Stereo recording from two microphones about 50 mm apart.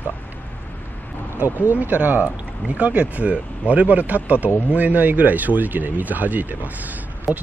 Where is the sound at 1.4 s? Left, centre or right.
Right.